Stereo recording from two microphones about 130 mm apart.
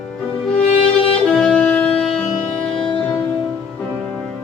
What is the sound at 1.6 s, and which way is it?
Music, 10° left (ahead or behind).